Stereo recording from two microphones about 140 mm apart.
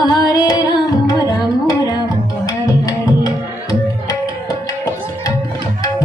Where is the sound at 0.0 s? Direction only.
30° left (ahead or behind).